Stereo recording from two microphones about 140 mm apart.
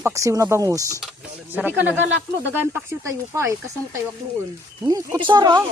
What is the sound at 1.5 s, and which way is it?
Speech, 10° right (ahead or behind).